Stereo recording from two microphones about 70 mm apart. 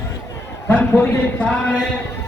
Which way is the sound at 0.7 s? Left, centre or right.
Left.